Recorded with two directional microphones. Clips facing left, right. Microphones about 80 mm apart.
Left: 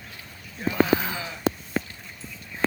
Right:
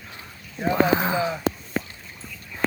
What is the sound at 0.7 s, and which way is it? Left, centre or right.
Speech, right.